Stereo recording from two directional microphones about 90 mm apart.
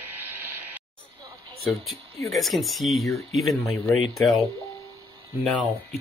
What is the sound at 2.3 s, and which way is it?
Speech, centre (ahead or behind).